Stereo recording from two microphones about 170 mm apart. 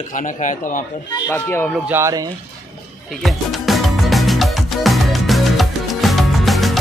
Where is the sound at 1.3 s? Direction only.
15° left (ahead or behind).